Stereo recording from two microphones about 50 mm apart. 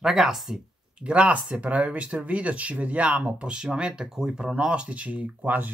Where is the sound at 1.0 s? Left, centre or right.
Right.